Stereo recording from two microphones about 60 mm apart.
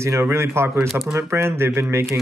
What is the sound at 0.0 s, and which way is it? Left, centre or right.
Speech, right.